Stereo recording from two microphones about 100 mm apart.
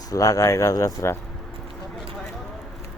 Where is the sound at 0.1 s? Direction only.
35° left (ahead or behind).